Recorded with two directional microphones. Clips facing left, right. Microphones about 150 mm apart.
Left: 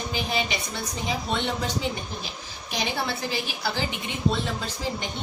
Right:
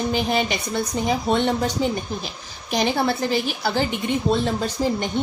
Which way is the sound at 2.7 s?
50° right (ahead or behind).